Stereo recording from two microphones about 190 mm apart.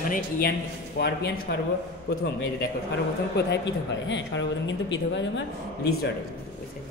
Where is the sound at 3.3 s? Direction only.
65° left (ahead or behind).